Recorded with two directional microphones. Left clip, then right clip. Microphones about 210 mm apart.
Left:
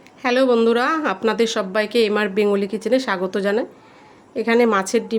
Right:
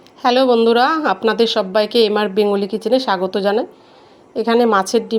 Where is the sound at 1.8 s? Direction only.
25° left (ahead or behind).